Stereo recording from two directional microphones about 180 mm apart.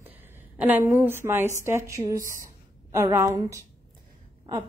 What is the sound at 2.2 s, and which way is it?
Speech, 45° right (ahead or behind).